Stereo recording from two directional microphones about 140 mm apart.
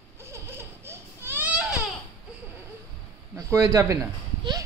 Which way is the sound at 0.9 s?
15° right (ahead or behind).